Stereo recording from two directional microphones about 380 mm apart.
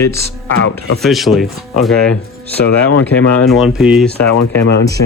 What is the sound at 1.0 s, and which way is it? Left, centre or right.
Speech, centre.